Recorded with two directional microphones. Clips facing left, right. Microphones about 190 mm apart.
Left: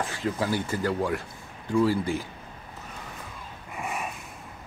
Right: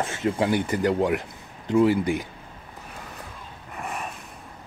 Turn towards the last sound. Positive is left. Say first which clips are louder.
# even
turn(degrees=5)  # may be behind; listen again after turning